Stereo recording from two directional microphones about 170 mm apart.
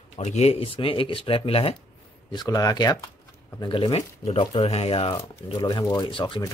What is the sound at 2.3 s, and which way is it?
Speech, 20° left (ahead or behind).